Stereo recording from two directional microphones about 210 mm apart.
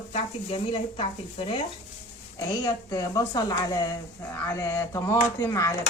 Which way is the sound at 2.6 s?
15° left (ahead or behind).